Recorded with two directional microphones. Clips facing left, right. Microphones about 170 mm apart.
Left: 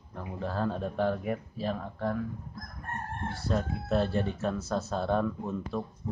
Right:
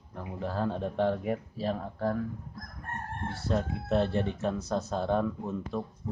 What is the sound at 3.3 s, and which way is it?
Speech, 25° right (ahead or behind).